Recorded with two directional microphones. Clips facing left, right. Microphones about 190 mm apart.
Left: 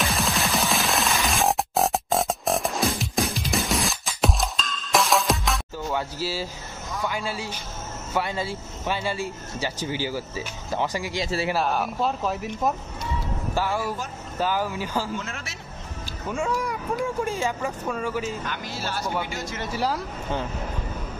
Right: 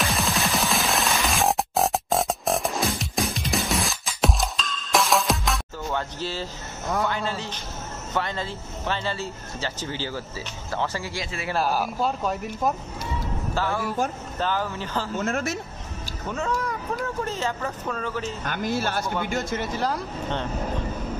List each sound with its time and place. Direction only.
0.0 s music: centre (ahead or behind)
7.1 s speech: 10° left (ahead or behind)
11.5 s speech: centre (ahead or behind)
13.6 s speech: 10° left (ahead or behind)
15.1 s speech: 45° right (ahead or behind)
16.3 s speech: 10° left (ahead or behind)
18.4 s speech: 50° right (ahead or behind)
19.7 s speech: 10° left (ahead or behind)